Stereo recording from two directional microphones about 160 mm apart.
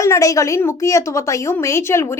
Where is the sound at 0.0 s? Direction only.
20° left (ahead or behind).